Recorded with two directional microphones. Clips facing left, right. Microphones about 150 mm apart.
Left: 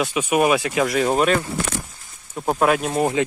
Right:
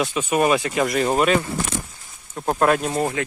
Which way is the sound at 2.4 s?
5° left (ahead or behind).